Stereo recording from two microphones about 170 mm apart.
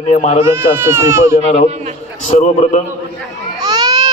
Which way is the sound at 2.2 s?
45° left (ahead or behind).